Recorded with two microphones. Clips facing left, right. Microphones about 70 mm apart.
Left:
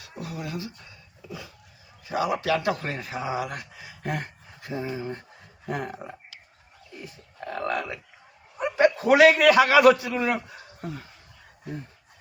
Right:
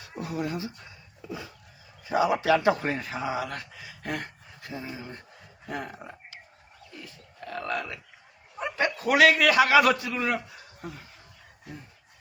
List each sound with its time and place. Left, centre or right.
0.4 s a man's voice: right
2.0 s a man's voice: right
2.9 s speech: centre; by 5.1 s left
5.6 s speech: left
7.4 s a man's voice: left